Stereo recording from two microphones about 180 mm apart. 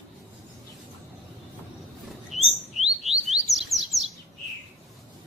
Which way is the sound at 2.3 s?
40° left (ahead or behind).